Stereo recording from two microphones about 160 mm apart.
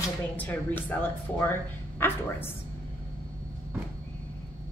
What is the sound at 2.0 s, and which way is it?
Speech, 15° left (ahead or behind).